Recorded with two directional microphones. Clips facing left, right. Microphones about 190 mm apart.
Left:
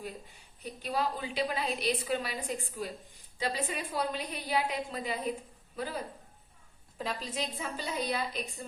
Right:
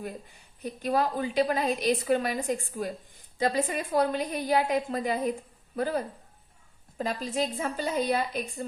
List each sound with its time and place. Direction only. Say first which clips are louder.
0.6 s a woman's voice: right 6 dB; 50° right (ahead or behind)
7.0 s a woman's voice: right 7 dB; 45° right (ahead or behind)